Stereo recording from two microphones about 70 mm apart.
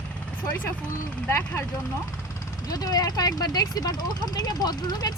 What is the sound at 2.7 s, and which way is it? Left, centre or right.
Speech, left.